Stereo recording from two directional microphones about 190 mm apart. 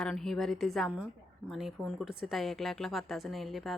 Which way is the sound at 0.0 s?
Centre (ahead or behind).